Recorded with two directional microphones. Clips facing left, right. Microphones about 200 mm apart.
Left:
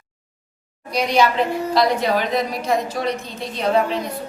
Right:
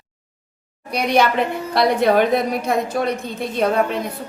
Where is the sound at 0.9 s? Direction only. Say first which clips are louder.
Right 1 dB; 60° right (ahead or behind).